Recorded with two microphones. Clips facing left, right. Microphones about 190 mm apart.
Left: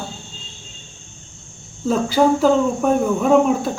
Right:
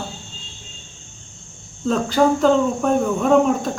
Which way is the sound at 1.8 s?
5° left (ahead or behind).